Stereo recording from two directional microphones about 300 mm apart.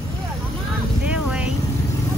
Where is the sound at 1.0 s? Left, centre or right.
Centre.